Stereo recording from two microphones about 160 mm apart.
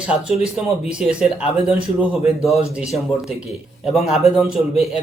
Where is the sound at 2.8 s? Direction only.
5° right (ahead or behind).